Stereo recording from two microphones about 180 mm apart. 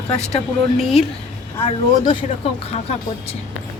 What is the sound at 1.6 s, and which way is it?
Speech, 30° left (ahead or behind).